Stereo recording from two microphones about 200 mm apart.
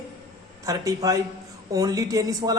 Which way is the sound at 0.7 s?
15° right (ahead or behind).